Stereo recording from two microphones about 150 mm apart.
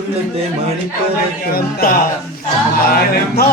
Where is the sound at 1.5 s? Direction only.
85° left.